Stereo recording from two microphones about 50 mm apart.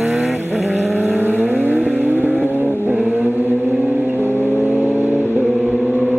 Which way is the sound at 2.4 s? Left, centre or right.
Left.